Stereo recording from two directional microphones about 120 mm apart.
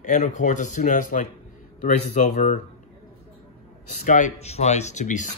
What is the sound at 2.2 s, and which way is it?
Speech, 90° left.